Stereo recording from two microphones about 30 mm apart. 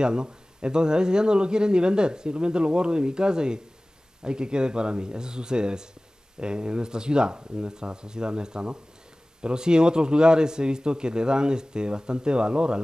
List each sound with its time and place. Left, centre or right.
0.0 s speech: right